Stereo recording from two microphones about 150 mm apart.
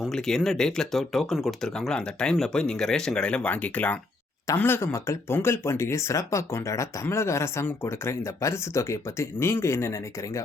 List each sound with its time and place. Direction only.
0.0 s speech: 5° left (ahead or behind); by 10.4 s 20° left (ahead or behind)